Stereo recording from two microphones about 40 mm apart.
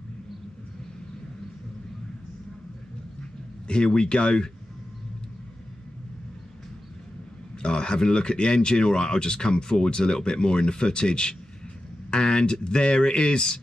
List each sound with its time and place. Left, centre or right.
3.6 s speech: left
7.6 s speech: left